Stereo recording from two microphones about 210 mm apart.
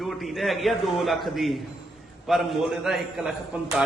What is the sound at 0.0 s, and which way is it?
A man's voice, centre (ahead or behind).